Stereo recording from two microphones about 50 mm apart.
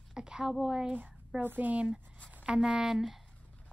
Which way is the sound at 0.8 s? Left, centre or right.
Right.